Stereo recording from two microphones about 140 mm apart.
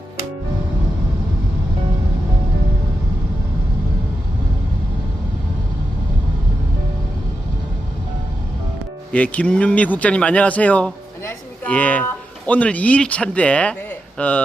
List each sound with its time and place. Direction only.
9.1 s speech: 10° left (ahead or behind)